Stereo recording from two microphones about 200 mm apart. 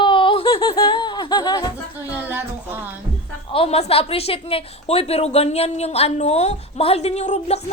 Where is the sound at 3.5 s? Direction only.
30° left (ahead or behind).